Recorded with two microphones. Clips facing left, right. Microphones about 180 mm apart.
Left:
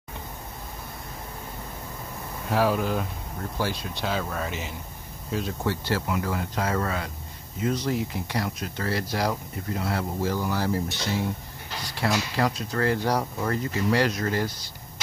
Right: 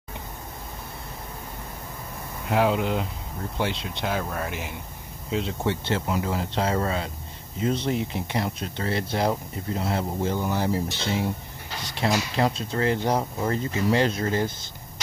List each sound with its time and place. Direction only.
2.5 s speech: 20° right (ahead or behind)
5.3 s speech: 25° right (ahead or behind)